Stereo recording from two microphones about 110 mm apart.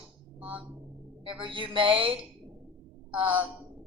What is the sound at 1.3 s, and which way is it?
Speech, 50° right (ahead or behind).